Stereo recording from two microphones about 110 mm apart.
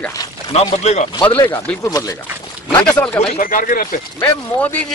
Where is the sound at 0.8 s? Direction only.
90° left.